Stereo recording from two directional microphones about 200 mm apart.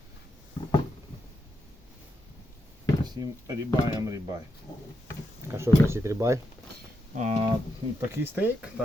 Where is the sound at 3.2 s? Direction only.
15° right (ahead or behind).